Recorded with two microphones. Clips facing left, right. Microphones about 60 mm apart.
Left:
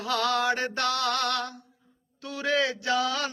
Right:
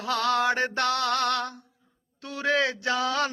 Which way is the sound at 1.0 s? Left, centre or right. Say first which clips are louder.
Right 2 dB; right.